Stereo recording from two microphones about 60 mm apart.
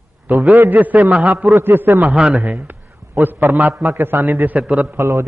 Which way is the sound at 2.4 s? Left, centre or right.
Right.